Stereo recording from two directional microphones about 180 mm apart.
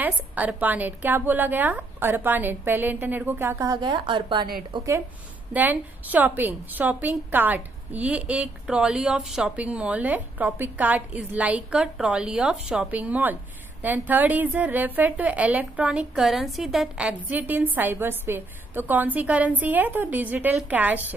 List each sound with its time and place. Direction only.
0.0 s a woman's voice: 10° right (ahead or behind); by 4.9 s 30° right (ahead or behind)
5.5 s a woman's voice: 10° right (ahead or behind)